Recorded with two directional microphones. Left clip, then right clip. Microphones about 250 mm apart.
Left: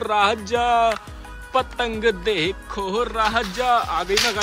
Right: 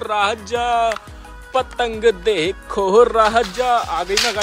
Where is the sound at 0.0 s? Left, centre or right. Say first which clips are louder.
Even; centre.